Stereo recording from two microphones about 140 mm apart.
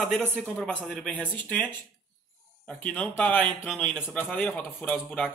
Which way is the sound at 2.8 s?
10° left (ahead or behind).